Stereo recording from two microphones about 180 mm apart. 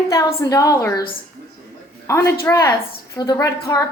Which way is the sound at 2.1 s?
15° left (ahead or behind).